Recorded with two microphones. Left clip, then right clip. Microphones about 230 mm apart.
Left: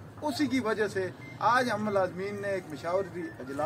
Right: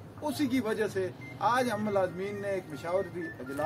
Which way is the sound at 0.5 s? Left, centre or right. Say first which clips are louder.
Left 1 dB; centre.